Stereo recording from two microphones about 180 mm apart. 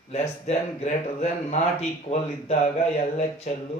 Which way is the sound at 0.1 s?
35° left (ahead or behind).